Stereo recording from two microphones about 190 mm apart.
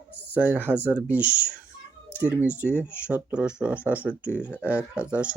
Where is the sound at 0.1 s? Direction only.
10° left (ahead or behind).